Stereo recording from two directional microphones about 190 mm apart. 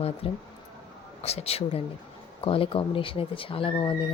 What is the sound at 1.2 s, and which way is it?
Speech, 35° left (ahead or behind).